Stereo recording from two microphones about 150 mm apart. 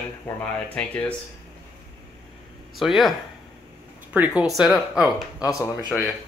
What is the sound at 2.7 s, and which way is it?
Speech, centre (ahead or behind).